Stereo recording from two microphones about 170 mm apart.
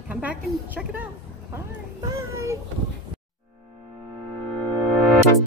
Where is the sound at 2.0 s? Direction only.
15° right (ahead or behind).